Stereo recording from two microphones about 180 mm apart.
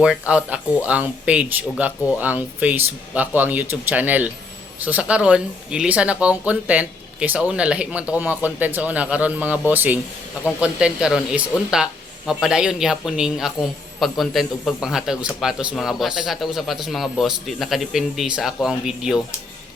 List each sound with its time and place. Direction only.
0.0 s speech: 5° right (ahead or behind)